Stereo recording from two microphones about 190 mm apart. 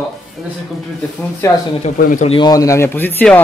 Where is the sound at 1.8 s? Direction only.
40° left (ahead or behind).